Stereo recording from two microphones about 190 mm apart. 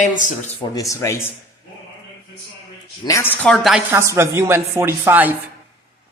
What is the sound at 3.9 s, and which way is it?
Speech, 15° right (ahead or behind).